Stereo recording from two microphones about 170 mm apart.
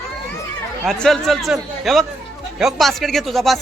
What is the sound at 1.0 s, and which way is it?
Speech, centre (ahead or behind).